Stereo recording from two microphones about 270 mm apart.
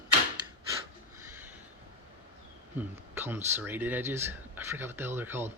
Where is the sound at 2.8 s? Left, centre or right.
Centre.